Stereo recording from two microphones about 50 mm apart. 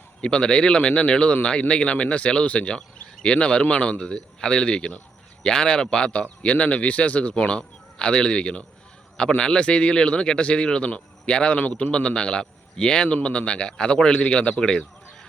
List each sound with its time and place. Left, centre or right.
0.2 s a man's voice: centre